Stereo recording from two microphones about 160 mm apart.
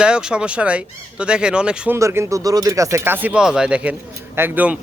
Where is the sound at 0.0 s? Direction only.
5° right (ahead or behind).